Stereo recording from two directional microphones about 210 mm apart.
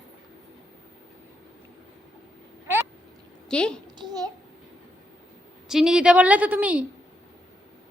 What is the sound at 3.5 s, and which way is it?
Speech, 5° left (ahead or behind).